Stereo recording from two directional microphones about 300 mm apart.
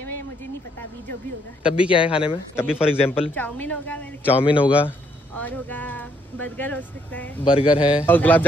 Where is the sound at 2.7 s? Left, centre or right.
Centre.